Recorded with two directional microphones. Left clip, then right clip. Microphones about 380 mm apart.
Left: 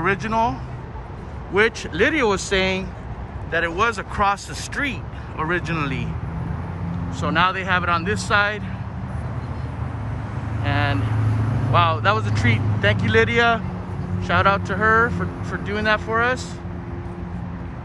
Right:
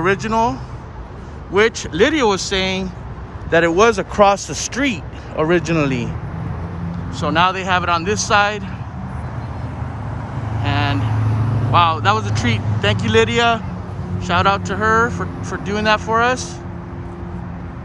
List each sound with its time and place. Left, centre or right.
0.0 s speech: centre
7.2 s speech: centre
10.6 s vehicle: centre
11.3 s vehicle: right
11.7 s speech: centre